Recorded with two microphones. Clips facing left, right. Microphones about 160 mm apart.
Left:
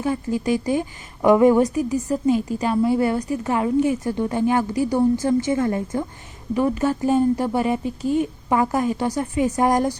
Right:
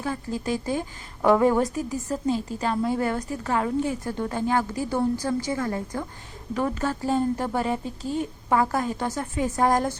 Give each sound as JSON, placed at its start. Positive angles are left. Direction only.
{"t": 0.0, "sound": "a woman's voice", "side_deg": 15}